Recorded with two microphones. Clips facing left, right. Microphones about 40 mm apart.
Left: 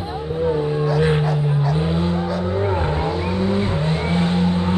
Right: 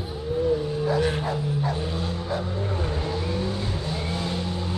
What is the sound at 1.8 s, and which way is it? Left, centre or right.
Vehicle, left.